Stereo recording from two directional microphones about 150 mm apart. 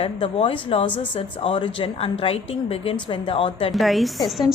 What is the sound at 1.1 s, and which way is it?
A woman's voice, 35° left (ahead or behind).